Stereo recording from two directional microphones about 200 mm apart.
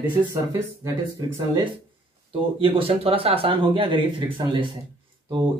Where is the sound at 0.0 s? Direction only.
15° right (ahead or behind).